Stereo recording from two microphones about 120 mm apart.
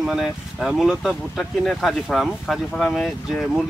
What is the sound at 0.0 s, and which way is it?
Speech, 5° right (ahead or behind).